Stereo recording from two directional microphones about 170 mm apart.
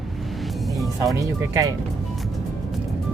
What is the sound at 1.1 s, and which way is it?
Speech, 20° right (ahead or behind).